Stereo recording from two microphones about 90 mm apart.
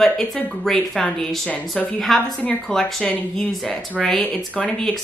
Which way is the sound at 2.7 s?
5° left (ahead or behind).